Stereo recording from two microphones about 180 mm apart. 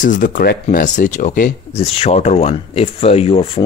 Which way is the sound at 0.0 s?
45° left (ahead or behind).